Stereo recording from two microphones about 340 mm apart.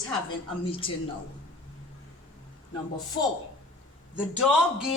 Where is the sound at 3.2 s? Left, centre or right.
Left.